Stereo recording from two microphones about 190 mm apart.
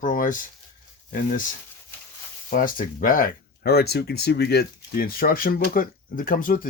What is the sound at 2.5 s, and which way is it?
Speech, 45° left (ahead or behind).